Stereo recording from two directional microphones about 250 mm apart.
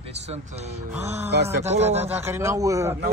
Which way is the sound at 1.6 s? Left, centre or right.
Right.